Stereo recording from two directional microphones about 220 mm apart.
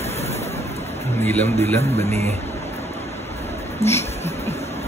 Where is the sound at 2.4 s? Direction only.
30° left (ahead or behind).